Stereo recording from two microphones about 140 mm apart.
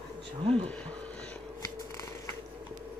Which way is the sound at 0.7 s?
10° left (ahead or behind).